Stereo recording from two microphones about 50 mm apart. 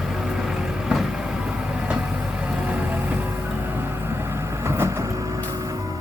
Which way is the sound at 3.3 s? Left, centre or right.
Right.